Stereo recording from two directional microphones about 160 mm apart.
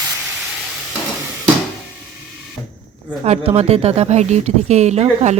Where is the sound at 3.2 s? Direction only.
40° right (ahead or behind).